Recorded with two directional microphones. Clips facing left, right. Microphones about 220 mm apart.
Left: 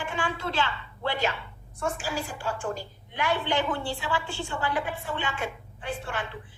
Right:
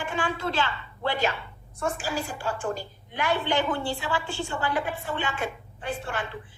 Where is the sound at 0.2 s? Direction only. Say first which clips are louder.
Right 2 dB; 40° right (ahead or behind).